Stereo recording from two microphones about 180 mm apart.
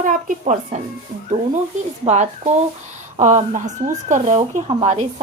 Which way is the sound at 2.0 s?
40° right (ahead or behind).